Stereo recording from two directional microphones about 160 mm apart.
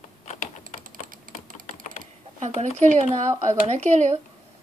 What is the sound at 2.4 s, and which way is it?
Speech, 50° right (ahead or behind).